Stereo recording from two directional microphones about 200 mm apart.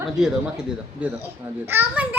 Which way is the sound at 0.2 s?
5° right (ahead or behind).